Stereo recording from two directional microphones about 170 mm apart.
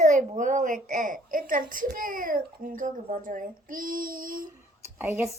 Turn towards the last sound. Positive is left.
turn(degrees=-10)  # may be behind; listen again after turning